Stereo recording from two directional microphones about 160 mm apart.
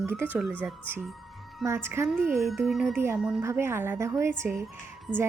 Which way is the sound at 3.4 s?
15° right (ahead or behind).